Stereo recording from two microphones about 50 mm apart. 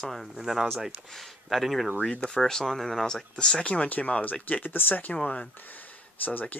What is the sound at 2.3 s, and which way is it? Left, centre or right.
Speech, centre.